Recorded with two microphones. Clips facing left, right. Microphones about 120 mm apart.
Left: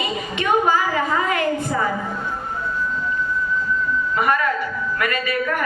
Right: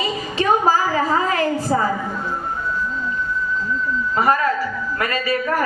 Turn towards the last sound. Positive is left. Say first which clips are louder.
# right 2 dB
turn(degrees=-30)  # may be behind; listen again after turning